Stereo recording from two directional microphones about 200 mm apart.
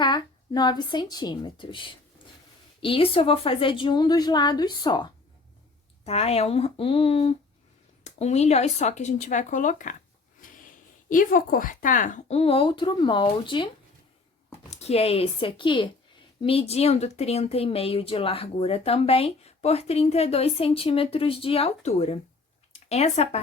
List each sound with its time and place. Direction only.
0.0 s a woman's voice: 20° left (ahead or behind); by 9.9 s 40° left (ahead or behind)
10.4 s a sound: 40° left (ahead or behind)
11.1 s speech: 40° left (ahead or behind); by 13.7 s 25° left (ahead or behind)
14.7 s speech: 30° left (ahead or behind)